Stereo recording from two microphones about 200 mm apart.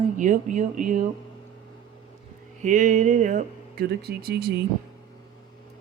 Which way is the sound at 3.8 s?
50° right (ahead or behind).